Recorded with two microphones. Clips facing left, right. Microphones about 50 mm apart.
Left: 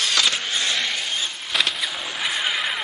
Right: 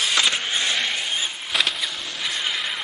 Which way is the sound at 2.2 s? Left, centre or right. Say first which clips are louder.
Left 3 dB; centre.